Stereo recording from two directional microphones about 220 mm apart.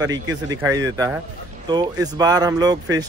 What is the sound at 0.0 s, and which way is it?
Speech, 15° right (ahead or behind).